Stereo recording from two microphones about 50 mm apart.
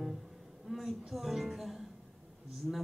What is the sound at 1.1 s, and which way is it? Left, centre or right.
Music, centre.